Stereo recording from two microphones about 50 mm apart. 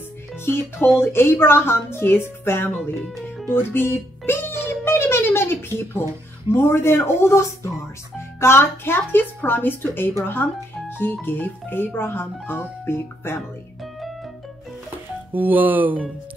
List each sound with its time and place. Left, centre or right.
0.9 s a woman's voice: left
3.4 s music: left
6.5 s a woman's voice: left
15.3 s speech: right